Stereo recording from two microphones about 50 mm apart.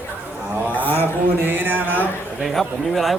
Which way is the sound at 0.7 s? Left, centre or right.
Left.